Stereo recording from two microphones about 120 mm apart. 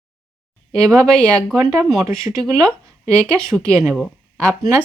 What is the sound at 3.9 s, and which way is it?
Speech, 5° left (ahead or behind).